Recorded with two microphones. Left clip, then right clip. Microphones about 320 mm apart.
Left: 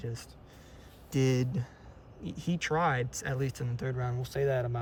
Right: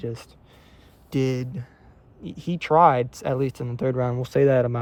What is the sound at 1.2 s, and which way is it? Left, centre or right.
Speech, centre.